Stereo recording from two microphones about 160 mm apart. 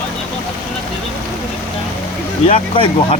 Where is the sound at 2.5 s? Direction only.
35° left (ahead or behind).